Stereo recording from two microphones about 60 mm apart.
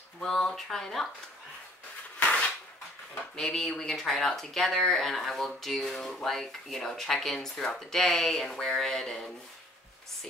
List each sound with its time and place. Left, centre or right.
0.2 s speech: centre
2.1 s a sound: left
3.3 s speech: centre